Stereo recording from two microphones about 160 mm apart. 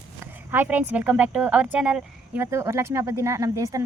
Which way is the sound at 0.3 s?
10° right (ahead or behind).